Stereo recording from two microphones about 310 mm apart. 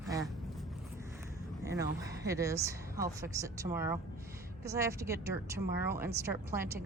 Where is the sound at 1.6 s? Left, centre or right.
Centre.